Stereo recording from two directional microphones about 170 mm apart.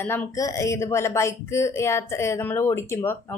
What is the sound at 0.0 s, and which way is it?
Speech, 10° left (ahead or behind).